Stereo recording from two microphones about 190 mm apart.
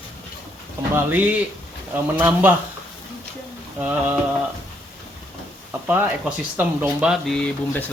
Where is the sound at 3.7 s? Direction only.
10° right (ahead or behind).